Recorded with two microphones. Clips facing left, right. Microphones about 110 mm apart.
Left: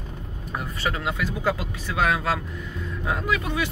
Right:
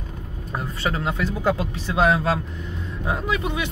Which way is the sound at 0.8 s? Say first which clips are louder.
Right 3 dB; 30° right (ahead or behind).